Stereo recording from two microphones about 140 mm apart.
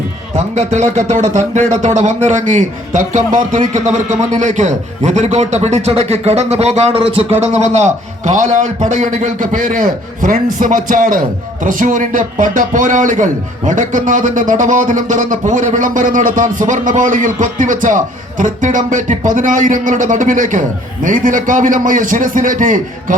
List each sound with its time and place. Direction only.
0.3 s a man's voice: 55° right (ahead or behind)